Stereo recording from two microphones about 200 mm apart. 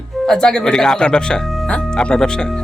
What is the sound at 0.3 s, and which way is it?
Speech, 5° left (ahead or behind).